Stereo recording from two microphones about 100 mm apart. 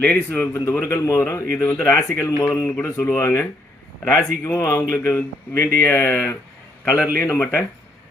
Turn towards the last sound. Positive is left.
turn(degrees=25)  # may be behind; listen again after turning